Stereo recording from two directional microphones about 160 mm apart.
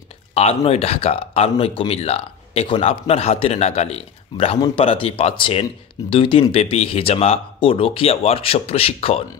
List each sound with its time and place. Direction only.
0.3 s speech: 40° left (ahead or behind)